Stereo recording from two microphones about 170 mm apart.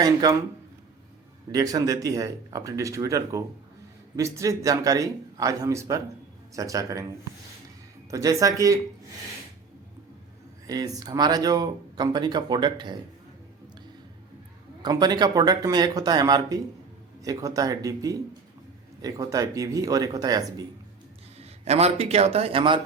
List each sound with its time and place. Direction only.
0.0 s speech: 20° right (ahead or behind)
1.5 s speech: 20° right (ahead or behind)
8.1 s speech: 20° right (ahead or behind)
10.7 s speech: 20° right (ahead or behind)
14.8 s speech: 25° right (ahead or behind)
21.3 s a man's voice: 40° right (ahead or behind)